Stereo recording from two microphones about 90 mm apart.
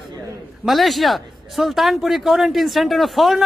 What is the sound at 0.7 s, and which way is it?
Speech, centre (ahead or behind).